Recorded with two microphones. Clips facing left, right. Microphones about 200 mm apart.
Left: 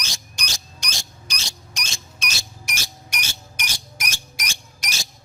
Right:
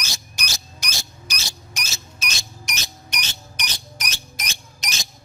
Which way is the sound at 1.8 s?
5° right (ahead or behind).